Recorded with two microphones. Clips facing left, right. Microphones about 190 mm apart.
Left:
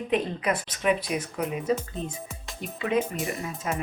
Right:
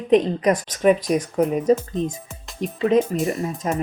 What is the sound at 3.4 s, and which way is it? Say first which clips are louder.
Speech: right 7 dB; 35° right (ahead or behind).